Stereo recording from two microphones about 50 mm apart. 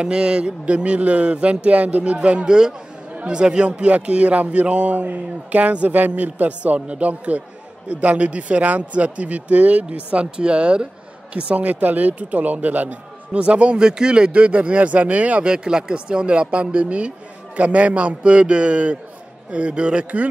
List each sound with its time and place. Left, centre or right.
0.0 s a man's voice: centre